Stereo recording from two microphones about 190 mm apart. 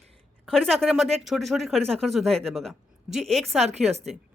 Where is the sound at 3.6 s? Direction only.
35° right (ahead or behind).